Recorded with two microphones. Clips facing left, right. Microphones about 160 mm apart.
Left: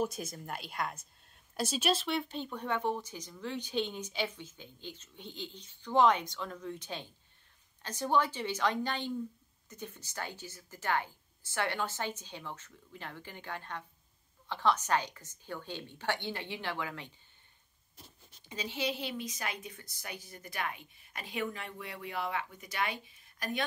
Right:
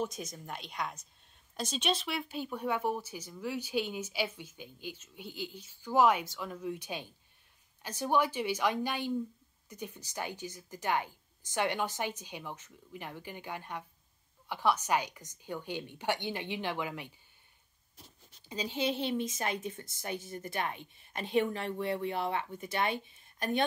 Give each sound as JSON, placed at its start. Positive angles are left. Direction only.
{"t": 0.0, "sound": "a woman's voice", "side_deg": 5}
{"t": 18.7, "sound": "a woman's voice", "side_deg": -25}